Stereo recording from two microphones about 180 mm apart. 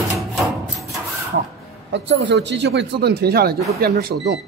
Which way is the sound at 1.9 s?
85° right.